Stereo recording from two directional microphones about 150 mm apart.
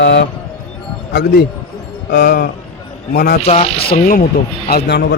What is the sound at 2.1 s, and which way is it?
Speech, 90° left.